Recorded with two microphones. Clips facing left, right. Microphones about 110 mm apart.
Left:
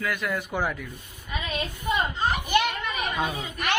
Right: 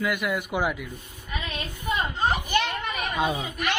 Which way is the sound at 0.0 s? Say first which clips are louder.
Right 2 dB; 15° right (ahead or behind).